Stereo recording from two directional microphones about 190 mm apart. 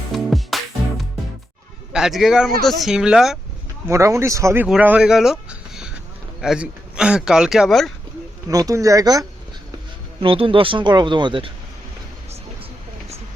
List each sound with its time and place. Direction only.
0.1 s music: centre (ahead or behind)
1.9 s a man's voice: centre (ahead or behind)
3.8 s speech: 15° right (ahead or behind); by 7.9 s centre (ahead or behind)
8.4 s speech: 20° right (ahead or behind)